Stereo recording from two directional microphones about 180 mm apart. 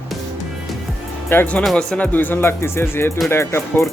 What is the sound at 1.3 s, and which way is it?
Speech, 10° left (ahead or behind).